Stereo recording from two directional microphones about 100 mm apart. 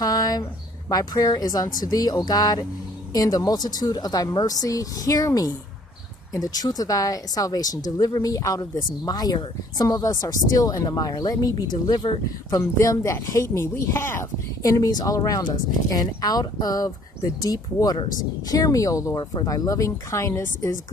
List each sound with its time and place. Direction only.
0.0 s a sound: 40° left (ahead or behind)
0.4 s speech: 40° left (ahead or behind)
14.6 s speech: 35° left (ahead or behind)